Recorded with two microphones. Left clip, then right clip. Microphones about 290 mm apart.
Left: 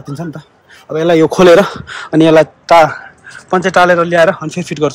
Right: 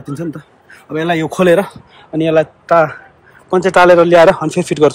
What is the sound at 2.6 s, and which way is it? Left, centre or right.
Speech, centre.